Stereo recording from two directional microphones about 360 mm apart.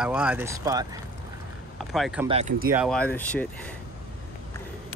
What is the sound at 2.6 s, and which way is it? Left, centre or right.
Speech, centre.